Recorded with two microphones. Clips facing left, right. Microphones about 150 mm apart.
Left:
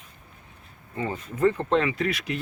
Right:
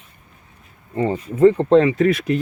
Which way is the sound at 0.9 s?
35° right (ahead or behind).